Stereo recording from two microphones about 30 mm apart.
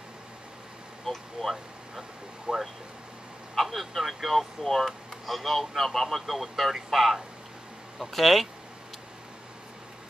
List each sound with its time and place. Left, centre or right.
1.1 s speech: centre
2.5 s speech: right
3.5 s speech: centre